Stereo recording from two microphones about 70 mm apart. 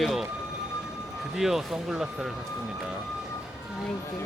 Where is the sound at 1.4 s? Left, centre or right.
Centre.